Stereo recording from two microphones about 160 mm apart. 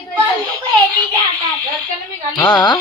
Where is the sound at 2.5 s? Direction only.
25° left (ahead or behind).